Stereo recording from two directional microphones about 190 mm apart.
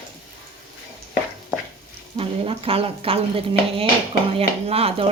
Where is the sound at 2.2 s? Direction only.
30° right (ahead or behind).